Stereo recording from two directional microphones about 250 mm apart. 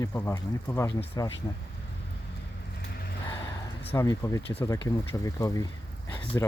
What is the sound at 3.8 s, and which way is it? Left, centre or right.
Speech, centre.